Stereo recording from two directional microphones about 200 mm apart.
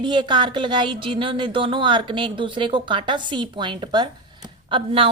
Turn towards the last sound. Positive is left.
turn(degrees=-25)  # may be behind; listen again after turning